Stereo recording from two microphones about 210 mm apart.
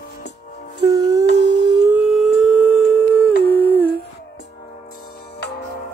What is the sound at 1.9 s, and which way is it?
Humming, centre (ahead or behind).